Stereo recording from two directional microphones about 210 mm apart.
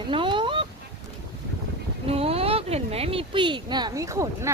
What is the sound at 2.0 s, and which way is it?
Speech, 30° right (ahead or behind).